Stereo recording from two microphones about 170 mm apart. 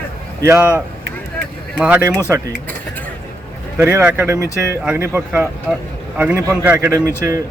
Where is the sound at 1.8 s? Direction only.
10° right (ahead or behind).